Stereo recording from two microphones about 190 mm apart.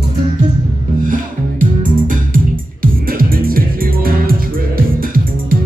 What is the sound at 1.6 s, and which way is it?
Music, 45° right (ahead or behind).